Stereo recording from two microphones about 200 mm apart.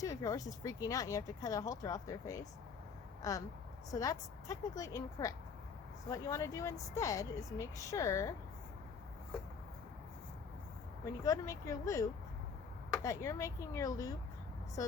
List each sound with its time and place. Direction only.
0.0 s speech: 15° left (ahead or behind)
11.0 s speech: 15° left (ahead or behind)
13.1 s speech: 15° left (ahead or behind)